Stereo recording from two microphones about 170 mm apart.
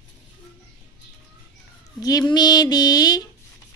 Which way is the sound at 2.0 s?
20° left (ahead or behind).